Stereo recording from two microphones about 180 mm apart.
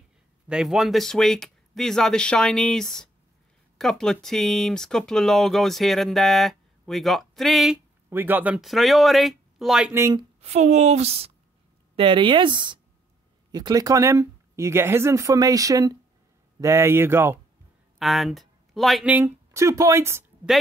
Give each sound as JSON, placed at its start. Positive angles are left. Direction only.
{"t": 0.5, "sound": "speech", "side_deg": -5}
{"t": 10.4, "sound": "a woman's voice", "side_deg": -40}
{"t": 17.9, "sound": "speech", "side_deg": 0}